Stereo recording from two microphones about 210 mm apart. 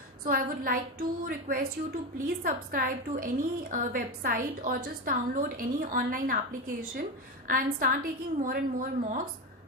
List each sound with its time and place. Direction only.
0.3 s a woman's voice: 45° right (ahead or behind)